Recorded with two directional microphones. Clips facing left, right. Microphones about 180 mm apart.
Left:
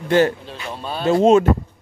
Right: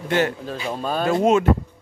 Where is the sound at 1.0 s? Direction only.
25° left (ahead or behind).